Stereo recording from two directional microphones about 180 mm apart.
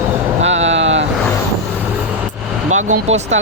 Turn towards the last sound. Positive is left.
turn(degrees=-40)  # may be behind; listen again after turning